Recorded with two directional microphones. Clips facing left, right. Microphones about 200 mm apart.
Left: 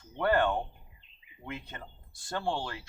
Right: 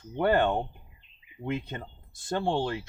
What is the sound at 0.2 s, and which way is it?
Speech, 20° right (ahead or behind).